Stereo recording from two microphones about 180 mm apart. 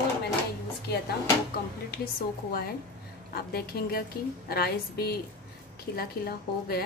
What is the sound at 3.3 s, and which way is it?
A woman's voice, 60° left (ahead or behind).